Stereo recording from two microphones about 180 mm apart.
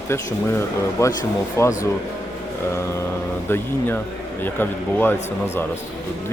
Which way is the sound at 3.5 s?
10° left (ahead or behind).